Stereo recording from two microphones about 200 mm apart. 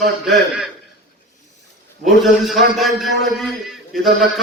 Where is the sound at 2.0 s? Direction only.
Centre (ahead or behind).